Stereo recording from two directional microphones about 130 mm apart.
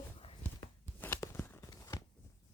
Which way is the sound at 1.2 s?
20° left (ahead or behind).